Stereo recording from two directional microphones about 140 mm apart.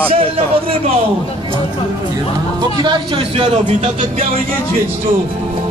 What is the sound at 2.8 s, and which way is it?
Speech, 35° right (ahead or behind).